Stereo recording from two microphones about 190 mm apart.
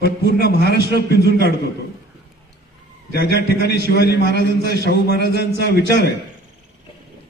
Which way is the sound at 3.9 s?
60° left (ahead or behind).